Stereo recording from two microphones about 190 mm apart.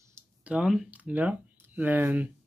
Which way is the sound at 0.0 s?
10° right (ahead or behind).